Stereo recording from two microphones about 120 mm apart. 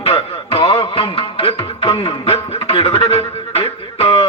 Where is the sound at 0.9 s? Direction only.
50° left (ahead or behind).